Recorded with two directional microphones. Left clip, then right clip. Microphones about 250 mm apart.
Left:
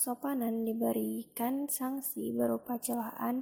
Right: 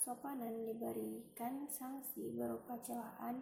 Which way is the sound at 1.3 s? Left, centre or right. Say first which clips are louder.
Left 12 dB; left.